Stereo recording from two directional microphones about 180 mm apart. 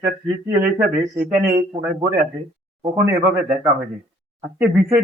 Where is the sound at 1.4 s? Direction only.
15° right (ahead or behind).